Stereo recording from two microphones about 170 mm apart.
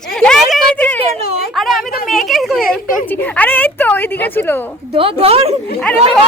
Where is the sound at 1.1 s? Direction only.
35° right (ahead or behind).